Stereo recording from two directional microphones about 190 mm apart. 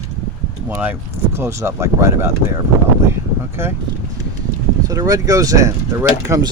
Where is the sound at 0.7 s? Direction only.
10° right (ahead or behind).